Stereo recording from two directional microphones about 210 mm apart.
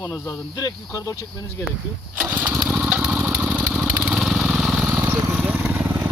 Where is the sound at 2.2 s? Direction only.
5° right (ahead or behind).